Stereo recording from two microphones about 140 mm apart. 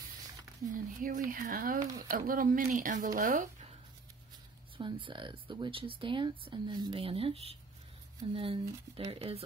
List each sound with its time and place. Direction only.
0.7 s speech: 70° right (ahead or behind)
4.7 s speech: 35° right (ahead or behind)